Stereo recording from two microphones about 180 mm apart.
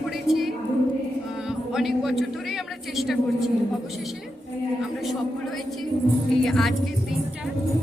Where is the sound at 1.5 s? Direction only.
Centre (ahead or behind).